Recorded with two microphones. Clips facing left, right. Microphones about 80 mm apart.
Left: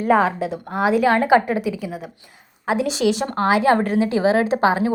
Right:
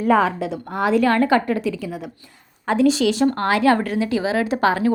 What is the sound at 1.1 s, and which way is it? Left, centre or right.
A woman's voice, centre.